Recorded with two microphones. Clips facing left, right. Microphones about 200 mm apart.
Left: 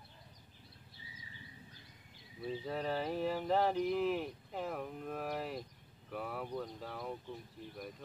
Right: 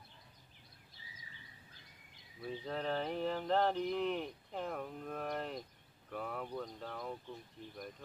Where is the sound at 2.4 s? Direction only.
5° left (ahead or behind).